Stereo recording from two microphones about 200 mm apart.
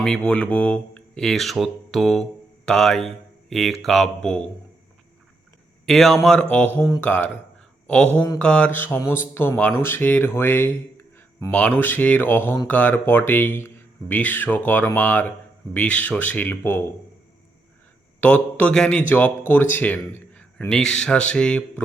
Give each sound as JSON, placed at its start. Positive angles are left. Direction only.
{"t": 0.0, "sound": "a man's voice", "side_deg": 5}
{"t": 5.8, "sound": "a man's voice", "side_deg": 0}
{"t": 18.2, "sound": "a man's voice", "side_deg": 10}